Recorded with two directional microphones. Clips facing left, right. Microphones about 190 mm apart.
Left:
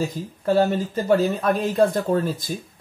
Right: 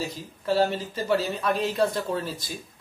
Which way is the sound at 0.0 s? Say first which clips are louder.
Left 7 dB; 50° left (ahead or behind).